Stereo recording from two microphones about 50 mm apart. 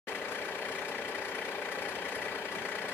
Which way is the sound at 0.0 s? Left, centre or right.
Left.